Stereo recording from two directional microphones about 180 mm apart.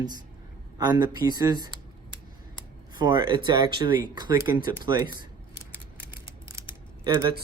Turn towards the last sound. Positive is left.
turn(degrees=-15)  # may be behind; listen again after turning